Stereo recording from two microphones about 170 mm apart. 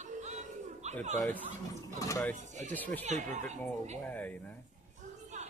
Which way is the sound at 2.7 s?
10° left (ahead or behind).